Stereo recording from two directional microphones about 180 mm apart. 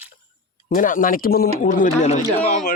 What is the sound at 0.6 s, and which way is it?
A man's voice, 45° left (ahead or behind).